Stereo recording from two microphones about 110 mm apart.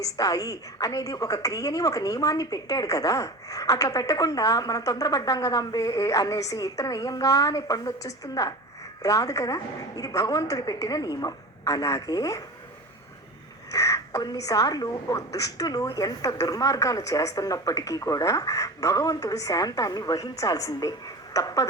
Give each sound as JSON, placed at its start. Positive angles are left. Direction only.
{"t": 0.0, "sound": "a woman's voice", "side_deg": 35}
{"t": 13.7, "sound": "a woman's voice", "side_deg": 30}